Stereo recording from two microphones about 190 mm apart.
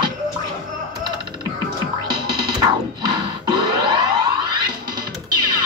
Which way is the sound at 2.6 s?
25° right (ahead or behind).